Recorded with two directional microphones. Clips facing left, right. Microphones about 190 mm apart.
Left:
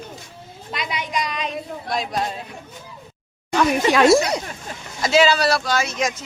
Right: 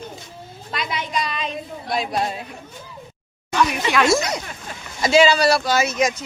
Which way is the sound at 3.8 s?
35° left (ahead or behind).